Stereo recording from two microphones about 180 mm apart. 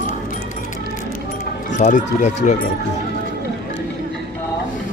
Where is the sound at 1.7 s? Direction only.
45° left (ahead or behind).